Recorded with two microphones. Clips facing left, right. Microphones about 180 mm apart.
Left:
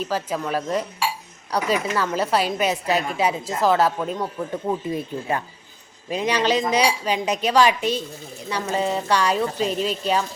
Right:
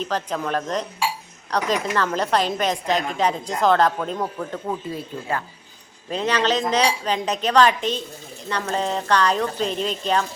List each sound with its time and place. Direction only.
0.0 s a woman's voice: 5° left (ahead or behind)